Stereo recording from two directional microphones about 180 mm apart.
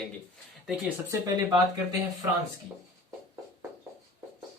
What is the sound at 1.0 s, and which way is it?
Speech, 20° right (ahead or behind).